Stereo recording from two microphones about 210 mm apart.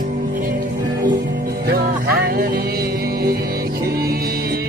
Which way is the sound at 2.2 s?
45° right (ahead or behind).